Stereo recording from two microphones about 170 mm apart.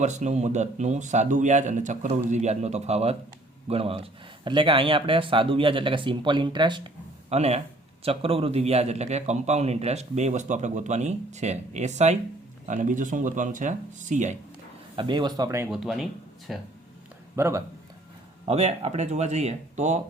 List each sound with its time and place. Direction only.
0.0 s a man's voice: 45° right (ahead or behind)
14.9 s speech: 25° right (ahead or behind)
15.7 s speech: centre (ahead or behind)
17.3 s speech: 15° right (ahead or behind)
18.4 s a man's voice: 40° right (ahead or behind)